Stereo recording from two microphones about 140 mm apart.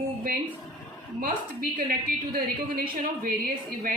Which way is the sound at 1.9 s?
90° right.